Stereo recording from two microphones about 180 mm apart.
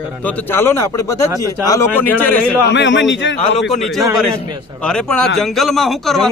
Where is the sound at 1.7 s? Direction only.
15° left (ahead or behind).